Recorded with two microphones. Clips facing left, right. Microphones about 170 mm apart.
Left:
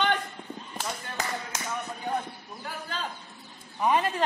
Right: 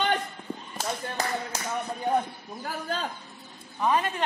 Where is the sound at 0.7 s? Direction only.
35° right (ahead or behind).